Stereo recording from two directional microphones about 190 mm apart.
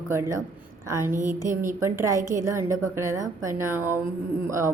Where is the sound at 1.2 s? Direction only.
40° right (ahead or behind).